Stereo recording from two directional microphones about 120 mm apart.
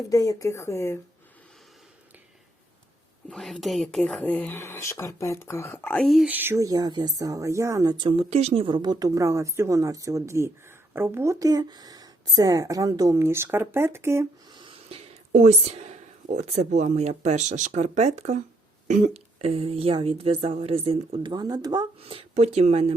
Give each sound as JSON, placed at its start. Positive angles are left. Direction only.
{"t": 0.1, "sound": "speech", "side_deg": 30}
{"t": 3.2, "sound": "speech", "side_deg": 5}
{"t": 4.6, "sound": "speech", "side_deg": 25}
{"t": 6.0, "sound": "speech", "side_deg": 0}
{"t": 6.2, "sound": "speech", "side_deg": -15}
{"t": 7.9, "sound": "speech", "side_deg": -45}
{"t": 8.3, "sound": "speech", "side_deg": -60}
{"t": 8.6, "sound": "speech", "side_deg": -40}
{"t": 14.5, "sound": "a sound", "side_deg": -45}
{"t": 15.3, "sound": "speech", "side_deg": -80}
{"t": 18.9, "sound": "speech", "side_deg": -80}
{"t": 21.3, "sound": "speech", "side_deg": -35}
{"t": 22.0, "sound": "speech", "side_deg": -55}